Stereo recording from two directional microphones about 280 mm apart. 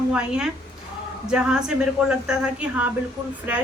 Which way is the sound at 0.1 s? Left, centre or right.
Centre.